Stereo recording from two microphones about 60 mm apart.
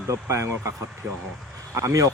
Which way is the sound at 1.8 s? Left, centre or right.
Right.